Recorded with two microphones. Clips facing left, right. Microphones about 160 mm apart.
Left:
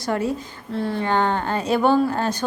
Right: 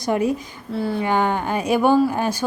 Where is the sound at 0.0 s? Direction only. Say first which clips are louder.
Right 3 dB; 15° right (ahead or behind).